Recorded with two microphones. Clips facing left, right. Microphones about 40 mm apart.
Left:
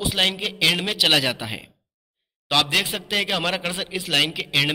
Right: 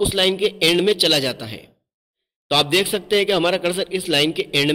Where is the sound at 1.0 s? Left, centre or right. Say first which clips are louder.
Right 1 dB; centre.